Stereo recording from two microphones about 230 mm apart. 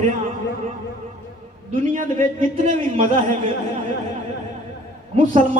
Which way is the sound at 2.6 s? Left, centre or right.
Right.